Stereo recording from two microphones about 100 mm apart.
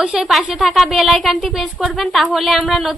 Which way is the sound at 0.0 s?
5° right (ahead or behind).